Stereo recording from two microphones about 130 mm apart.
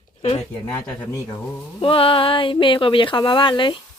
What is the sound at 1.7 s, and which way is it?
Speech, 45° left (ahead or behind).